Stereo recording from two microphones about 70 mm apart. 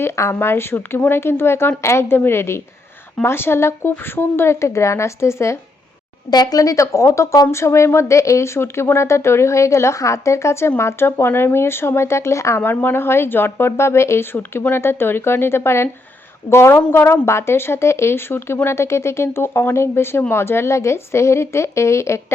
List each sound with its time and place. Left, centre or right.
0.0 s speech: left
6.3 s speech: left
12.6 s speech: left